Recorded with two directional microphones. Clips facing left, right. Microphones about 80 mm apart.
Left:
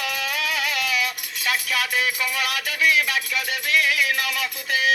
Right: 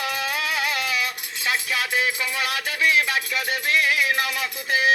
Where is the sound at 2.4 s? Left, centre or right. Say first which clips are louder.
Even; right.